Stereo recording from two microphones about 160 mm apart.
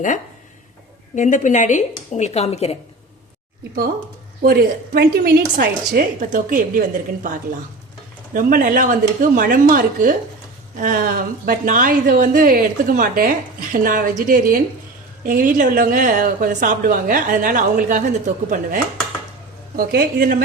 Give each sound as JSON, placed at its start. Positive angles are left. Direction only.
{"t": 1.1, "sound": "a woman's voice", "side_deg": 50}
{"t": 4.4, "sound": "a woman's voice", "side_deg": -75}
{"t": 5.5, "sound": "speech", "side_deg": -65}
{"t": 19.7, "sound": "speech", "side_deg": -70}